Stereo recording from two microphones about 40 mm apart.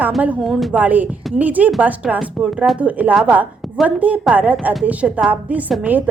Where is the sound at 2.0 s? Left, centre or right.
Centre.